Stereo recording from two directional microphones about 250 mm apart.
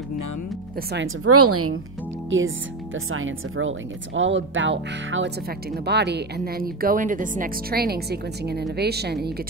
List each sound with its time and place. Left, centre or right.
0.9 s a woman's voice: right
2.2 s speech: right